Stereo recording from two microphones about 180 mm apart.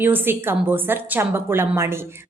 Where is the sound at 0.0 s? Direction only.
10° right (ahead or behind).